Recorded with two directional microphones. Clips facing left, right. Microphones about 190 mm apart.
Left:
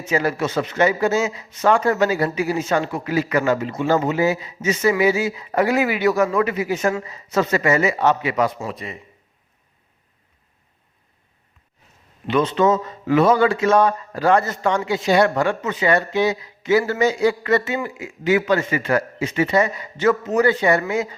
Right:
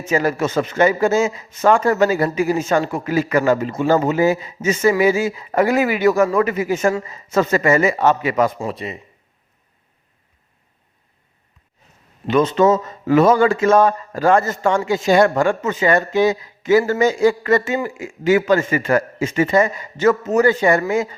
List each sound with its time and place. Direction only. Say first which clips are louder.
0.0 s speech: right 2 dB; 45° right (ahead or behind)
8.5 s a man's voice: right 4 dB; 30° right (ahead or behind)
12.3 s speech: right 3 dB; 45° right (ahead or behind)